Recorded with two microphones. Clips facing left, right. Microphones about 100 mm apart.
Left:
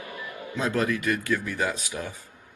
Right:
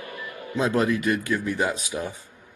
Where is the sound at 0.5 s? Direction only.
20° right (ahead or behind).